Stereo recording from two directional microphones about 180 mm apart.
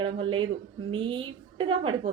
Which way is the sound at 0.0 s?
30° right (ahead or behind).